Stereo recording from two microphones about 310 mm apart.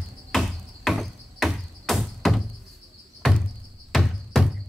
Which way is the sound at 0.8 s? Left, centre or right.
Centre.